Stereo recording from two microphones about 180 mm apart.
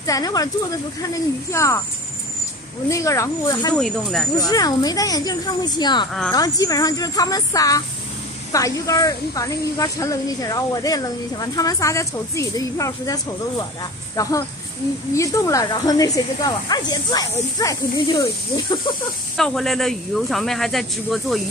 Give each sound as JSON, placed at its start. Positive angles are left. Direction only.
{"t": 0.0, "sound": "a woman's voice", "side_deg": 20}
{"t": 2.9, "sound": "speech", "side_deg": 15}
{"t": 3.7, "sound": "speech", "side_deg": 0}
{"t": 4.4, "sound": "a woman's voice", "side_deg": 20}
{"t": 19.3, "sound": "speech", "side_deg": 0}